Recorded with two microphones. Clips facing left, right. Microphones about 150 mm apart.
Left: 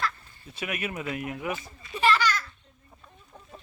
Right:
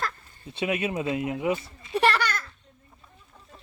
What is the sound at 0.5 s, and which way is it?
Speech, 25° right (ahead or behind).